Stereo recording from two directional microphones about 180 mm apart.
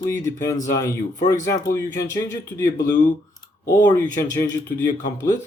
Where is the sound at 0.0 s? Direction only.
15° left (ahead or behind).